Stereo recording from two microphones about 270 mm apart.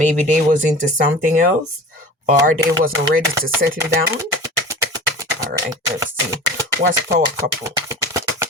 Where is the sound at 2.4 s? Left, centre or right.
Right.